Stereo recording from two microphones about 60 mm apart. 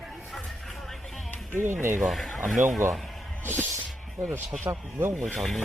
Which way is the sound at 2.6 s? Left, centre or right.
Right.